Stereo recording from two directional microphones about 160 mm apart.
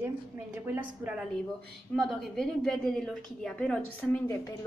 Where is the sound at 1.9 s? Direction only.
5° left (ahead or behind).